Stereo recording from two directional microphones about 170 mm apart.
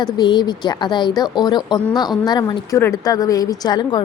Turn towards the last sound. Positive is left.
turn(degrees=25)  # may be behind; listen again after turning